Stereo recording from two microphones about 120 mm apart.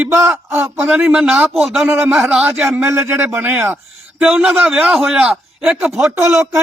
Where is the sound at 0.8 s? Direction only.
10° right (ahead or behind).